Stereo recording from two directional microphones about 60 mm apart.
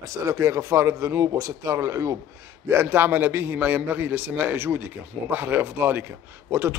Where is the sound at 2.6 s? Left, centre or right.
Right.